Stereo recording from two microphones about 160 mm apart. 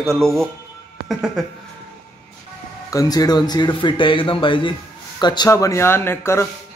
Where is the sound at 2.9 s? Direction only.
25° left (ahead or behind).